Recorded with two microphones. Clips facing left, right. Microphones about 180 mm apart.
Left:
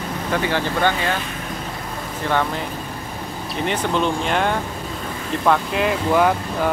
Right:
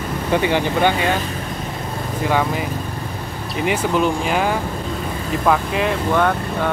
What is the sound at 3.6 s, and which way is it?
Speech, 10° right (ahead or behind).